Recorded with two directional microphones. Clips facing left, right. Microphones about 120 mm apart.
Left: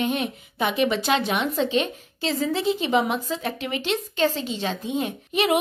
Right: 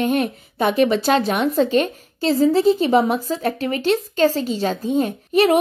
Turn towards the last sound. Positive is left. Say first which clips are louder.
# right 6 dB
turn(degrees=-40)  # may be behind; listen again after turning